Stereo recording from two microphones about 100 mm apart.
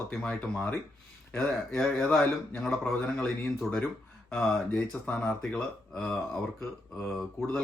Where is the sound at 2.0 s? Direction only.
5° left (ahead or behind).